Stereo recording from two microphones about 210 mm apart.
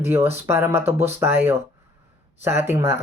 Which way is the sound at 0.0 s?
10° right (ahead or behind).